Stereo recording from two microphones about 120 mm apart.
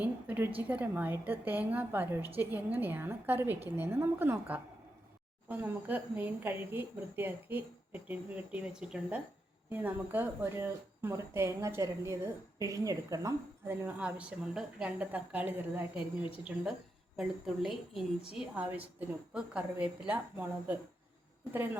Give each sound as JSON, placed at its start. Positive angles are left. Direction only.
{"t": 0.0, "sound": "a woman's voice", "side_deg": -15}
{"t": 16.0, "sound": "a woman's voice", "side_deg": 45}
{"t": 17.2, "sound": "a woman's voice", "side_deg": -5}